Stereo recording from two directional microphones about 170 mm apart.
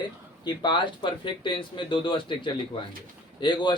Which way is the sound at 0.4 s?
25° left (ahead or behind).